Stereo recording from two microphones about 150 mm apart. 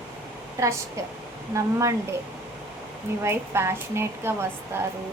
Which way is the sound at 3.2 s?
15° right (ahead or behind).